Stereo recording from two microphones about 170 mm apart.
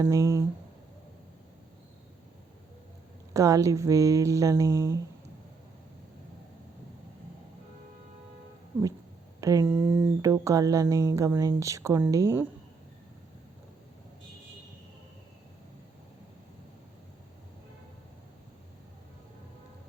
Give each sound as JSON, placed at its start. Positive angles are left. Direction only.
{"t": 0.0, "sound": "speech", "side_deg": -15}
{"t": 3.3, "sound": "speech", "side_deg": -20}
{"t": 9.4, "sound": "speech", "side_deg": -20}